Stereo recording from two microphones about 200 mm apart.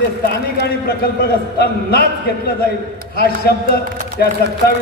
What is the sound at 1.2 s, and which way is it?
A man's voice, 50° left (ahead or behind).